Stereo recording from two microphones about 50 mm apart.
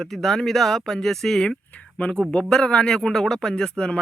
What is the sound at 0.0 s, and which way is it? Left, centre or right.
Speech, centre.